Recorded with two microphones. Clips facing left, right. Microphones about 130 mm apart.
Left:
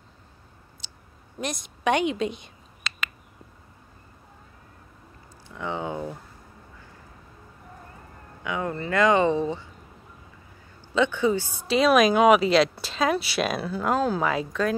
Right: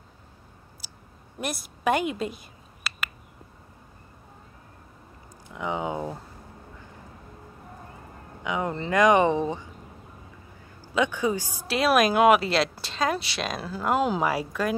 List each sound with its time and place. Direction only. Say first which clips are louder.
0.8 s clicking: right 1 dB; 5° right (ahead or behind)
1.4 s speech: even; 5° right (ahead or behind)
5.5 s a sound: right 1 dB; 15° right (ahead or behind)
8.5 s speech: right 1 dB; 20° right (ahead or behind)
11.0 s speech: left 2 dB; 10° right (ahead or behind)